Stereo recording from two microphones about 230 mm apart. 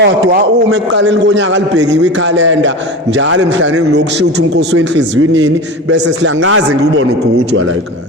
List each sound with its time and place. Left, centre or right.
0.0 s a man's voice: right